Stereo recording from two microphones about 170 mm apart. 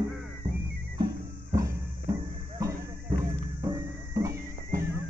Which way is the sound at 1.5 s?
20° right (ahead or behind).